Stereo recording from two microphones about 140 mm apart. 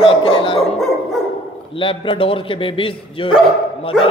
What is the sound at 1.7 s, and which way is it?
A man's voice, 35° left (ahead or behind).